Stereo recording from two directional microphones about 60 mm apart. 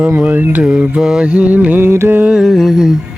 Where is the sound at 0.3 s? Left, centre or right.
Right.